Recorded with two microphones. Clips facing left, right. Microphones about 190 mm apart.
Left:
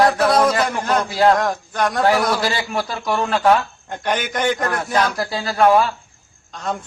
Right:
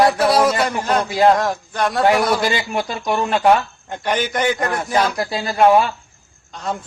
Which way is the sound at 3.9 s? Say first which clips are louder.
Right 2 dB; 5° right (ahead or behind).